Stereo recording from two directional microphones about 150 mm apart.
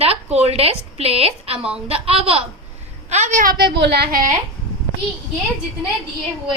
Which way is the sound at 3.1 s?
55° right (ahead or behind).